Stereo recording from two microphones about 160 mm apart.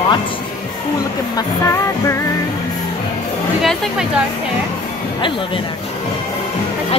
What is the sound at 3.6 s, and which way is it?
Speech, centre (ahead or behind).